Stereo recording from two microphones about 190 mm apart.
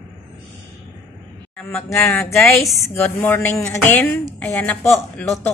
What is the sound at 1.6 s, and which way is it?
Speech, 15° left (ahead or behind).